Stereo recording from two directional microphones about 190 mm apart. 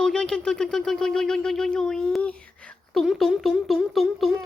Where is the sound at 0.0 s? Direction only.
5° left (ahead or behind).